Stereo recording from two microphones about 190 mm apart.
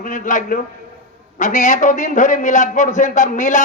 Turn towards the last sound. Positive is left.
turn(degrees=40)  # may be behind; listen again after turning